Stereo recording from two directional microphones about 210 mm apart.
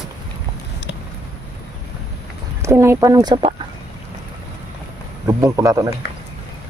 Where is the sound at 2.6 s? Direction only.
10° right (ahead or behind).